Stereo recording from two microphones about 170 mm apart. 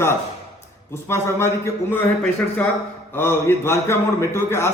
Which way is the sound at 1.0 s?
15° left (ahead or behind).